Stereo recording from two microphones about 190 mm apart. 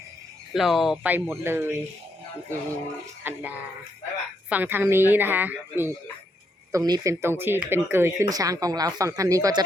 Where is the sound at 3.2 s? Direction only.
10° right (ahead or behind).